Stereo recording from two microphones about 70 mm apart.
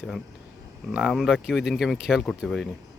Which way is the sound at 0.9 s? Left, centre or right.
Centre.